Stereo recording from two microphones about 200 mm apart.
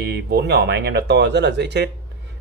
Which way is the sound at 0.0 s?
55° right (ahead or behind).